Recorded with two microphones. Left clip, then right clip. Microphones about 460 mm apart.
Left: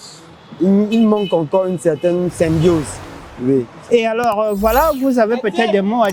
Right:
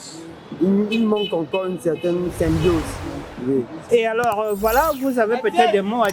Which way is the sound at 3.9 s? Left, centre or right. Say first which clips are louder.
Left 3 dB; left.